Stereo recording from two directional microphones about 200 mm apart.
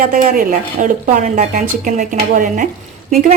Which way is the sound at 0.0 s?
45° right (ahead or behind).